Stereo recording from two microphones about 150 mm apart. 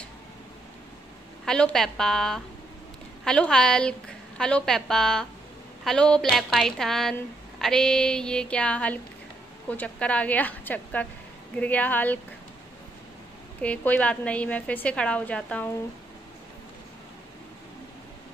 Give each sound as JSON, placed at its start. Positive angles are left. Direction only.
{"t": 1.4, "sound": "a woman's voice", "side_deg": 5}
{"t": 13.6, "sound": "a woman's voice", "side_deg": 10}